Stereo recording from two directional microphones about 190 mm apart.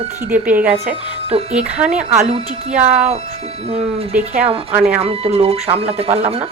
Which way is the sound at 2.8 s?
35° right (ahead or behind).